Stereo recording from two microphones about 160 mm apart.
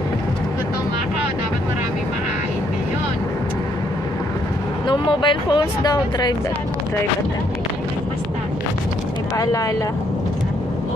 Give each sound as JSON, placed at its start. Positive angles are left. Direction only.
{"t": 4.8, "sound": "speech", "side_deg": 30}
{"t": 9.4, "sound": "speech", "side_deg": 20}